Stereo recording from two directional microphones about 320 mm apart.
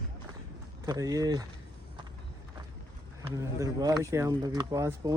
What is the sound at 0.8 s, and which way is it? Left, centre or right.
Speech, centre.